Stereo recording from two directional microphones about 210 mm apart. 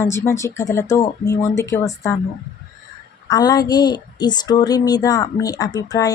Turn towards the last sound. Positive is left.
turn(degrees=15)  # may be behind; listen again after turning